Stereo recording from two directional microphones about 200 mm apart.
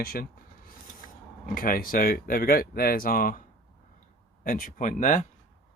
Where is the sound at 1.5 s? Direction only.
45° left (ahead or behind).